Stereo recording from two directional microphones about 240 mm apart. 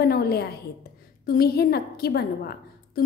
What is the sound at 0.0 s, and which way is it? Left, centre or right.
A woman's voice, left.